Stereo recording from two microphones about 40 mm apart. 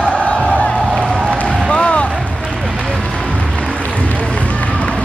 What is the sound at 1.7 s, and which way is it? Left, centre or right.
Basketball bounce, left.